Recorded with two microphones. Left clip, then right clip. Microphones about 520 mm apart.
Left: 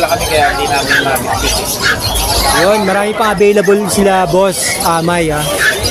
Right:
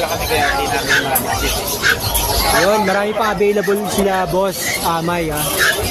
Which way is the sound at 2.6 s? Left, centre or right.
Right.